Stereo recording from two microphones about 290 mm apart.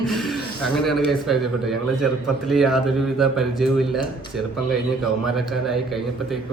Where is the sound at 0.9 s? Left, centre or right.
Centre.